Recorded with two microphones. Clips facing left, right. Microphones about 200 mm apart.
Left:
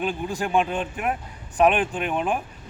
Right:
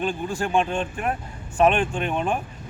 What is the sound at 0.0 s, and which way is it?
Speech, 15° left (ahead or behind).